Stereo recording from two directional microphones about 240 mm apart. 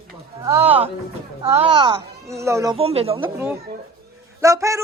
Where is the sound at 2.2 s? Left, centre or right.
Centre.